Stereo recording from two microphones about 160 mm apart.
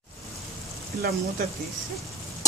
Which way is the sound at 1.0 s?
75° right (ahead or behind).